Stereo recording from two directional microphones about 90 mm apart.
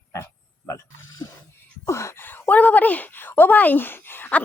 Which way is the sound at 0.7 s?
40° left (ahead or behind).